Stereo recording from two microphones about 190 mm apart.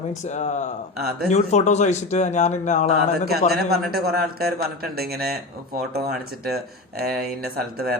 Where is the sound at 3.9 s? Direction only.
55° right (ahead or behind).